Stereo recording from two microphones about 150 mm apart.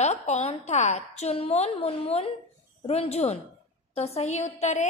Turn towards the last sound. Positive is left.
turn(degrees=50)  # may be behind; listen again after turning